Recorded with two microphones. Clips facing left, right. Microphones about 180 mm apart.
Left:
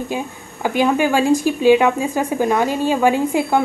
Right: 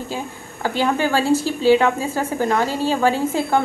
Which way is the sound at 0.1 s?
15° left (ahead or behind).